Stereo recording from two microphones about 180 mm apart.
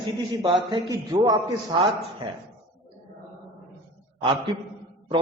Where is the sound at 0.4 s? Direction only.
30° right (ahead or behind).